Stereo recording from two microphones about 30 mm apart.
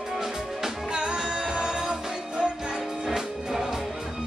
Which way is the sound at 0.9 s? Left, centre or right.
Right.